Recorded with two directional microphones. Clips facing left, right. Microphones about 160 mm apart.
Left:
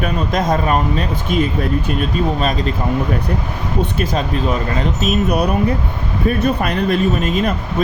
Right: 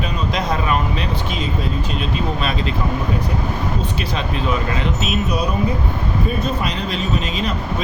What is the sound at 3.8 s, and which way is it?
Speech, 45° left (ahead or behind).